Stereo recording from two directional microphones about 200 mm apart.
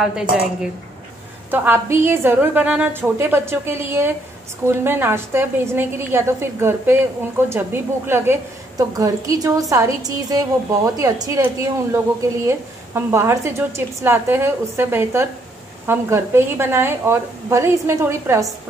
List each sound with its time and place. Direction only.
0.0 s a woman's voice: 5° right (ahead or behind)
12.4 s a woman's voice: 15° right (ahead or behind)